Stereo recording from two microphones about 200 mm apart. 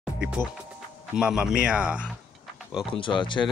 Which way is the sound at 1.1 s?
5° right (ahead or behind).